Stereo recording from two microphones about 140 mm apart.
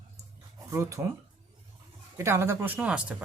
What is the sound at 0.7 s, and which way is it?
Speech, 20° right (ahead or behind).